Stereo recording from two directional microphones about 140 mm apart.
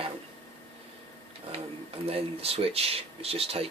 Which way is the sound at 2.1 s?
45° right (ahead or behind).